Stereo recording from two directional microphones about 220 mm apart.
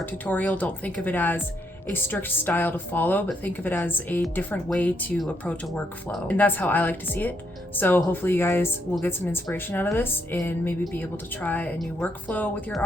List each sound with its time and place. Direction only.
0.0 s speech: 5° left (ahead or behind)